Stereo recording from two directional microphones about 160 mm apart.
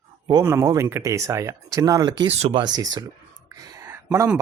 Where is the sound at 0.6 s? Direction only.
20° right (ahead or behind).